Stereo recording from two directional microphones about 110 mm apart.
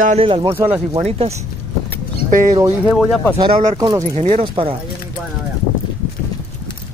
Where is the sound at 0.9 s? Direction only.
65° right (ahead or behind).